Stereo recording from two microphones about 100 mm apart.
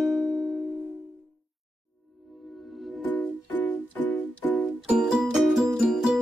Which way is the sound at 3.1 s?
15° left (ahead or behind).